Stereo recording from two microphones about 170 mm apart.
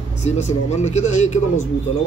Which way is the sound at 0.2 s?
40° left (ahead or behind).